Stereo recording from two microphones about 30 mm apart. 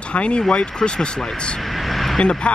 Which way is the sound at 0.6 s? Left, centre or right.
Left.